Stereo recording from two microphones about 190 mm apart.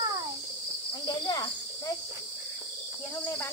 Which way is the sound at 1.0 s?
20° left (ahead or behind).